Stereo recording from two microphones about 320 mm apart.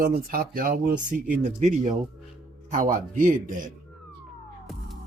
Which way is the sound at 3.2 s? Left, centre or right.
Right.